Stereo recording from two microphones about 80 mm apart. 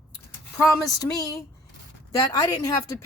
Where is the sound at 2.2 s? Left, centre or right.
Left.